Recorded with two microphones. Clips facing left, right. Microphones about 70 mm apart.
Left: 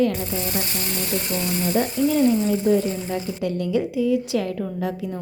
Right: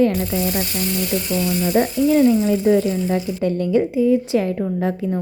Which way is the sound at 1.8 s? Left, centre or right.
Right.